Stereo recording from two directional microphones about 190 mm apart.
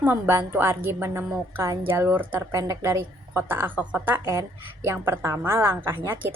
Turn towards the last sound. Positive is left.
turn(degrees=-10)  # may be behind; listen again after turning